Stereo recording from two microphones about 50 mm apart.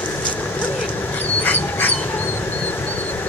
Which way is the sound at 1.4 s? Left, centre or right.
Left.